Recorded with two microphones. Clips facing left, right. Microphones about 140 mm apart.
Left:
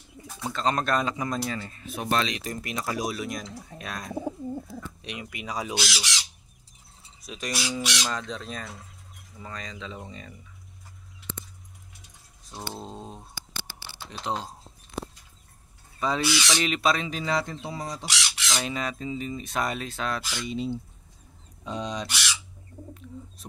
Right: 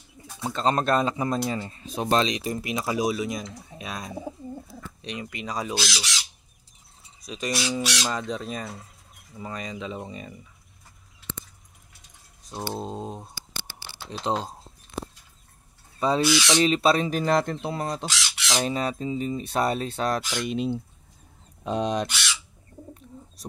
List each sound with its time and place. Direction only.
0.4 s speech: 30° right (ahead or behind); by 6.0 s 10° left (ahead or behind)
7.2 s speech: centre (ahead or behind)
12.7 s speech: 15° right (ahead or behind)
16.0 s speech: 30° right (ahead or behind)
17.1 s speech: 50° right (ahead or behind)
18.6 s speech: 35° right (ahead or behind)
20.2 s speech: 65° right (ahead or behind)